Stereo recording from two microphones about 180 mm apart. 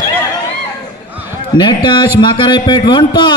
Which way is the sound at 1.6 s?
25° left (ahead or behind).